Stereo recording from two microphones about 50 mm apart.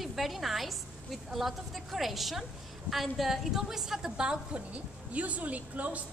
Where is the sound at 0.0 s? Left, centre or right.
Centre.